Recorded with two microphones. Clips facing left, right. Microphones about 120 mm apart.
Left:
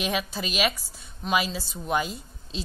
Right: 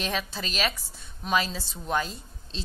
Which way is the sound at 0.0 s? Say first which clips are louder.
Left 3 dB; 10° left (ahead or behind).